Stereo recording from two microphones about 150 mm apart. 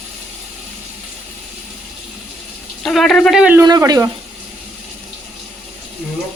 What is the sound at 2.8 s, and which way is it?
Speech, 5° left (ahead or behind).